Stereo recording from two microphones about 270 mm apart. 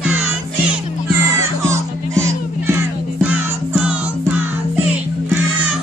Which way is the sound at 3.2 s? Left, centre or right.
Centre.